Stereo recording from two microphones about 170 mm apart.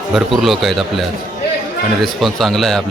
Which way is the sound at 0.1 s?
Centre (ahead or behind).